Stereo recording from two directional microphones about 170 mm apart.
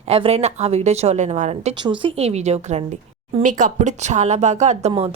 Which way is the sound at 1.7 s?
30° right (ahead or behind).